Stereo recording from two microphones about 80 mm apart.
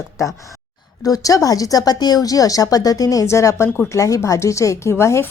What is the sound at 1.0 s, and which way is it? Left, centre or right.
A woman's voice, left.